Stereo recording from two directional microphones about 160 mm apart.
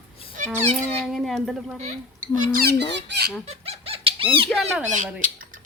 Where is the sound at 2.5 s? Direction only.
80° right.